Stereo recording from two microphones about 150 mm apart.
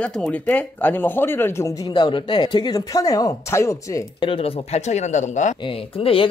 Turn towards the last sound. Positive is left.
turn(degrees=35)  # may be behind; listen again after turning